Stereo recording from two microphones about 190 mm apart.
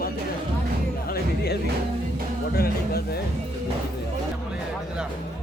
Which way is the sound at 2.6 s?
55° left (ahead or behind).